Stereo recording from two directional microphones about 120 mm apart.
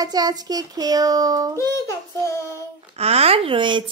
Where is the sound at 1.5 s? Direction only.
25° left (ahead or behind).